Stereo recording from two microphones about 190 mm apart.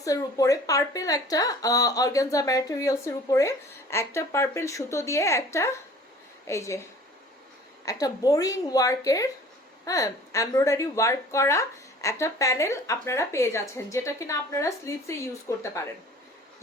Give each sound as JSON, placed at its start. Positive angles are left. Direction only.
{"t": 0.0, "sound": "a woman's voice", "side_deg": 15}
{"t": 7.9, "sound": "a woman's voice", "side_deg": 20}